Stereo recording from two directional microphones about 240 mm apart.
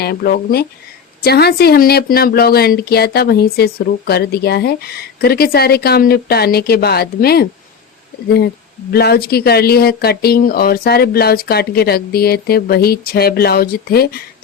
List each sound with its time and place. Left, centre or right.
0.0 s speech: left
8.9 s speech: left